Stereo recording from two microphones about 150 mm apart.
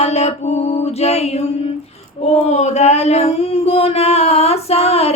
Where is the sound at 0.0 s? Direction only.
45° left (ahead or behind).